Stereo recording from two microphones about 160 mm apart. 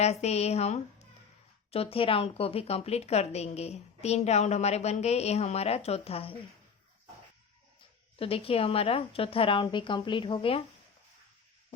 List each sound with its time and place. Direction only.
0.0 s a woman's voice: 45° left (ahead or behind)
8.2 s a woman's voice: 35° left (ahead or behind)